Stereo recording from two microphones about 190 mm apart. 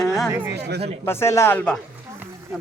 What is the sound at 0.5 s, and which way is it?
Speech, 60° right (ahead or behind).